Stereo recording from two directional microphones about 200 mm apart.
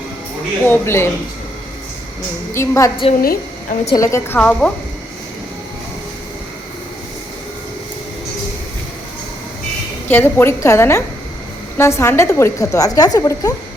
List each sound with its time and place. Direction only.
0.6 s a woman's voice: 10° left (ahead or behind)
2.5 s a woman's voice: 15° left (ahead or behind)
3.2 s a woman's voice: 45° left (ahead or behind)
3.9 s a woman's voice: 15° left (ahead or behind)
10.1 s a woman's voice: 10° left (ahead or behind)